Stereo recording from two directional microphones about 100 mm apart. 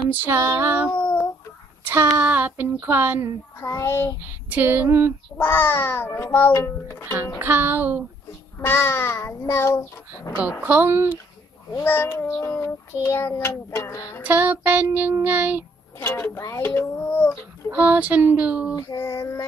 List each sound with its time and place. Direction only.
0.2 s speech: 25° right (ahead or behind)
1.9 s speech: 20° right (ahead or behind)
3.6 s child singing: 30° left (ahead or behind)
4.6 s speech: 20° right (ahead or behind)
5.4 s child singing: 25° left (ahead or behind)
7.3 s speech: 20° right (ahead or behind)
8.5 s child singing: 25° left (ahead or behind)
10.6 s speech: 20° right (ahead or behind)
11.8 s child singing: 20° left (ahead or behind)
14.2 s speech: 15° right (ahead or behind)
16.0 s child singing: 25° left (ahead or behind)
17.6 s speech: 15° right (ahead or behind)
18.8 s child singing: 30° left (ahead or behind)